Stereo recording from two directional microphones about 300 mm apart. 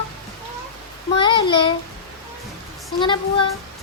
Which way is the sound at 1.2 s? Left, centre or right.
Centre.